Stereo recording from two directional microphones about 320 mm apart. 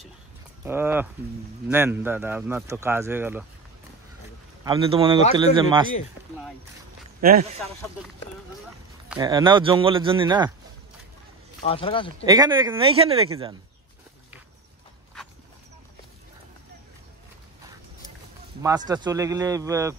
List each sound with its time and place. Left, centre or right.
0.7 s speech: centre
4.6 s speech: centre
7.2 s speech: right
9.1 s speech: centre
11.6 s speech: centre
12.3 s speech: centre
18.9 s speech: centre